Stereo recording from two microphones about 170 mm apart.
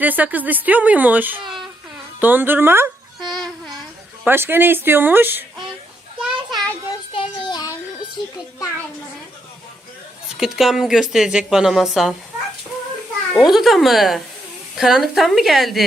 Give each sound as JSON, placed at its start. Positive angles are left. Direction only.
{"t": 0.0, "sound": "speech", "side_deg": -10}
{"t": 3.2, "sound": "a sound", "side_deg": 0}
{"t": 4.3, "sound": "speech", "side_deg": -10}
{"t": 6.2, "sound": "a sound", "side_deg": 0}
{"t": 7.1, "sound": "child singing", "side_deg": 30}
{"t": 10.3, "sound": "speech", "side_deg": -5}
{"t": 13.3, "sound": "speech", "side_deg": 0}